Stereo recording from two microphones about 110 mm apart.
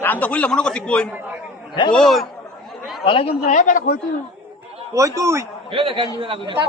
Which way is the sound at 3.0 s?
55° left (ahead or behind).